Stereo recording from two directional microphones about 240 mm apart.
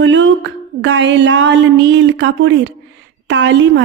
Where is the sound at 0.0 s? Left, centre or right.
Right.